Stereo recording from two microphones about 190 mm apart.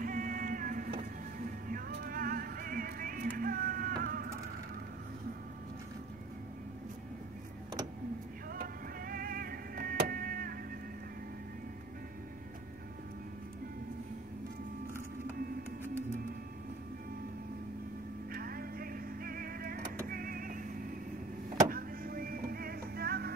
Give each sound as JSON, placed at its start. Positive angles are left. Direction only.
{"t": 0.0, "sound": "music", "side_deg": -45}
{"t": 8.5, "sound": "music", "side_deg": -50}
{"t": 18.3, "sound": "music", "side_deg": -50}